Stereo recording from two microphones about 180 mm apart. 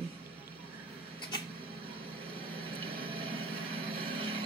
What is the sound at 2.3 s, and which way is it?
Vehicle, 30° right (ahead or behind).